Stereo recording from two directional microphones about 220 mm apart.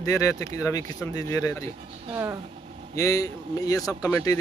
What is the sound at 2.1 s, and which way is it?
Speech, 10° right (ahead or behind).